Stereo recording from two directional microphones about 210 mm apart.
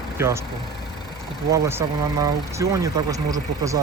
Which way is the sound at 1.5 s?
15° right (ahead or behind).